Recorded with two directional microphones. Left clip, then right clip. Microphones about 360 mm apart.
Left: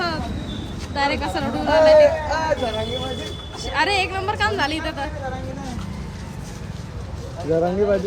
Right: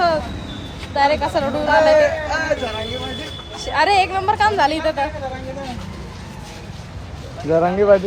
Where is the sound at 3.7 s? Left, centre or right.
Centre.